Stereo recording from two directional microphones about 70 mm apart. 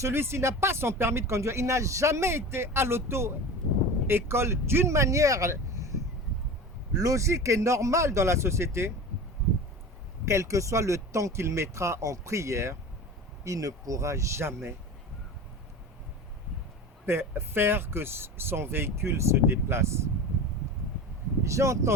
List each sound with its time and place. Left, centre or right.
0.0 s speech: right
6.9 s speech: right
10.2 s speech: right
17.1 s speech: right
21.4 s speech: right